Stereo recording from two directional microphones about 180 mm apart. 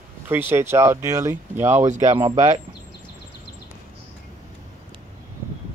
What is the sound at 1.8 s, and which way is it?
Speech, 45° right (ahead or behind).